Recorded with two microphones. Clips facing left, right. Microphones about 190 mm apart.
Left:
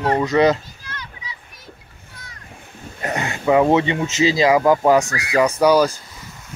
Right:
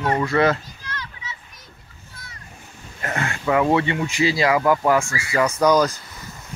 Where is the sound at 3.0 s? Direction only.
20° left (ahead or behind).